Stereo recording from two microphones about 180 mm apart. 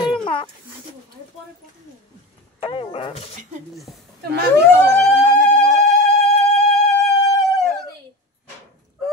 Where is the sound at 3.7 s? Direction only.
Centre (ahead or behind).